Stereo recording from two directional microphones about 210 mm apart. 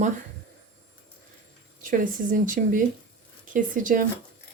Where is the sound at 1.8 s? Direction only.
40° right (ahead or behind).